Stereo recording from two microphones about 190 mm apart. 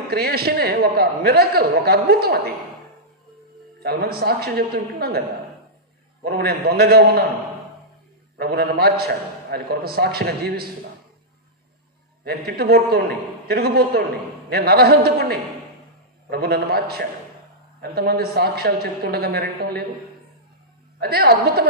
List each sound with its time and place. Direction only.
0.1 s a man's voice: 55° right (ahead or behind)
3.8 s a man's voice: 55° right (ahead or behind)
6.2 s a man's voice: 55° right (ahead or behind)
8.4 s a man's voice: 55° right (ahead or behind)
12.3 s a man's voice: 55° right (ahead or behind)
21.0 s a man's voice: 55° right (ahead or behind)